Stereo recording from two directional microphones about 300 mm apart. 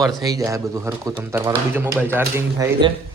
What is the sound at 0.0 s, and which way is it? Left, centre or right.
Speech, centre.